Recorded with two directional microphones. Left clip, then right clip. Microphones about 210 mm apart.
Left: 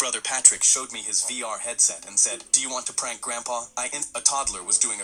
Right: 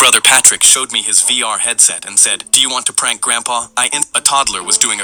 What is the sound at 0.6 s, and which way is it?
Speech, 45° right (ahead or behind).